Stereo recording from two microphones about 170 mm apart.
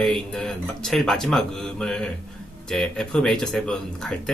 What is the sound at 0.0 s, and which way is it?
Speech, 5° left (ahead or behind).